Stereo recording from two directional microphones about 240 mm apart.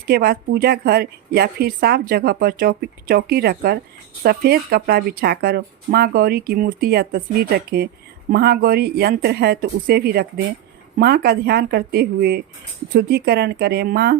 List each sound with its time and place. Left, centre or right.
0.1 s a woman's voice: right